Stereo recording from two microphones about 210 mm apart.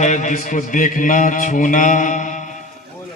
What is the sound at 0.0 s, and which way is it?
Mantra, 35° left (ahead or behind).